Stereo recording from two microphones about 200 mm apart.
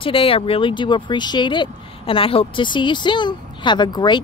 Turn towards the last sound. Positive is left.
turn(degrees=20)  # may be behind; listen again after turning